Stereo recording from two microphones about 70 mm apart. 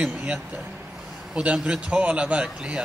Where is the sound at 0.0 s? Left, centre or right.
Centre.